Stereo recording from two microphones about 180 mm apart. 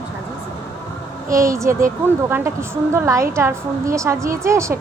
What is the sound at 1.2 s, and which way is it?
A woman's voice, 15° right (ahead or behind).